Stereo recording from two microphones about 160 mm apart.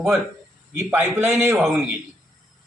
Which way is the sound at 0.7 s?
15° right (ahead or behind).